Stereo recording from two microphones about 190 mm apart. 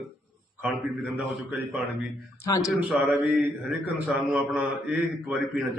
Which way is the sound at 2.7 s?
5° right (ahead or behind).